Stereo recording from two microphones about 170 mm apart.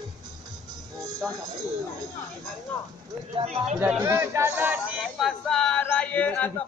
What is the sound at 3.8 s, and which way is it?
Speech, 10° right (ahead or behind).